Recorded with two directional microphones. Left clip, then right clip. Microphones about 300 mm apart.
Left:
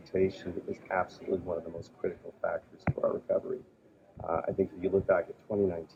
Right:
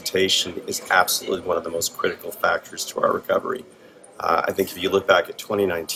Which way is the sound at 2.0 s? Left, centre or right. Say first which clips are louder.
Right 10 dB; right.